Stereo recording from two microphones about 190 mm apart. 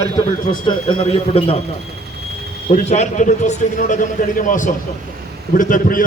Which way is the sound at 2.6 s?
35° left (ahead or behind).